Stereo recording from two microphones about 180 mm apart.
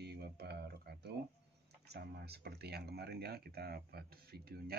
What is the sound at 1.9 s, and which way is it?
Speech, 65° right (ahead or behind).